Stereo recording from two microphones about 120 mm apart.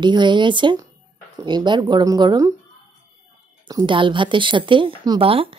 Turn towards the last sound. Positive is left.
turn(degrees=-50)  # may be behind; listen again after turning